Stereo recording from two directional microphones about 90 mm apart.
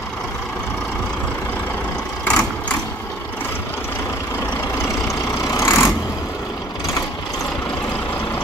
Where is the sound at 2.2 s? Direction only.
10° left (ahead or behind).